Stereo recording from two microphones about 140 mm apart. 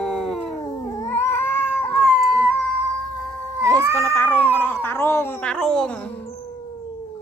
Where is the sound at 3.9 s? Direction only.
10° left (ahead or behind).